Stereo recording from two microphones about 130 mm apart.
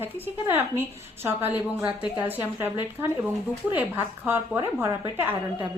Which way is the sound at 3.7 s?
15° right (ahead or behind).